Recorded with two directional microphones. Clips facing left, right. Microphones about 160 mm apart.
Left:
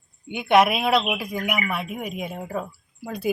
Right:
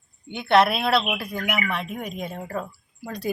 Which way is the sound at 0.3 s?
10° left (ahead or behind).